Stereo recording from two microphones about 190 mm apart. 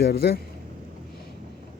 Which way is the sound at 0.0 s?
55° left (ahead or behind).